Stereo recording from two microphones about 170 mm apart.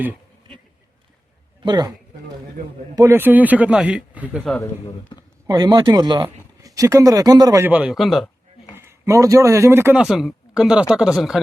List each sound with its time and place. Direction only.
1.6 s speech: 25° right (ahead or behind)
2.9 s a man's voice: 15° right (ahead or behind)
4.4 s speech: 10° left (ahead or behind)
4.9 s speech: 25° left (ahead or behind)
5.5 s speech: 25° right (ahead or behind)
7.7 s speech: 5° right (ahead or behind)
8.7 s a man's voice: 15° right (ahead or behind)